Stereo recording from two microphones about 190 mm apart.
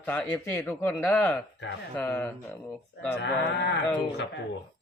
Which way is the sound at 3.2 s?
70° left (ahead or behind).